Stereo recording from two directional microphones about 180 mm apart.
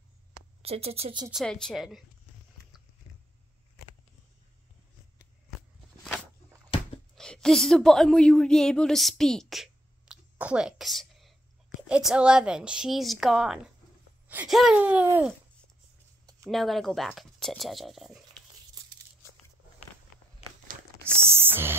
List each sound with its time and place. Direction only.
0.6 s speech: 35° right (ahead or behind)
1.3 s speech: 5° left (ahead or behind)
6.7 s a sound: 30° left (ahead or behind)
7.2 s a woman's voice: 5° left (ahead or behind)
16.4 s speech: centre (ahead or behind)
21.1 s a sound: 15° right (ahead or behind)